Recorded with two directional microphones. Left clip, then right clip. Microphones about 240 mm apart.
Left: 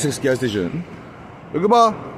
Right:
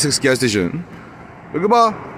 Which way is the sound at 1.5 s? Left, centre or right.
Centre.